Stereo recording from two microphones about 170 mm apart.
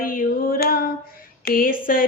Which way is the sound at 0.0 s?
55° left (ahead or behind).